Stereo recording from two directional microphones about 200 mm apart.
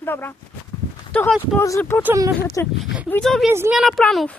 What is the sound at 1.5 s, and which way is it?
Speech, 15° left (ahead or behind).